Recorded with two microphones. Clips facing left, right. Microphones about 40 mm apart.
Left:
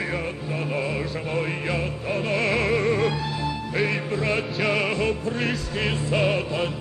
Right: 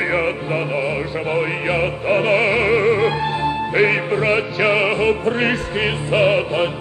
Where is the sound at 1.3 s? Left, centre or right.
Right.